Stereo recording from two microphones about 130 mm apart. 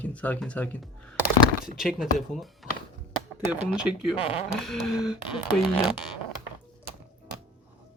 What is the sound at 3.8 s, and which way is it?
Speech, 5° right (ahead or behind).